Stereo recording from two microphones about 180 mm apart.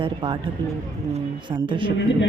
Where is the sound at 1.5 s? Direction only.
25° right (ahead or behind).